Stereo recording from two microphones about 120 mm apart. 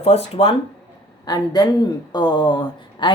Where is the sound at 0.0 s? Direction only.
55° left (ahead or behind).